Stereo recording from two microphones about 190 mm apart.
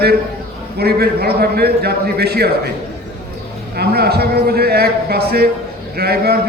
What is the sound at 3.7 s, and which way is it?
A man's voice, 55° right (ahead or behind).